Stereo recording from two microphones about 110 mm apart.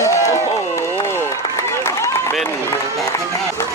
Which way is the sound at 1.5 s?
25° left (ahead or behind).